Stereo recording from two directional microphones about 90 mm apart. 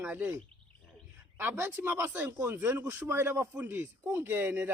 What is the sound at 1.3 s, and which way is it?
Speech, 25° right (ahead or behind).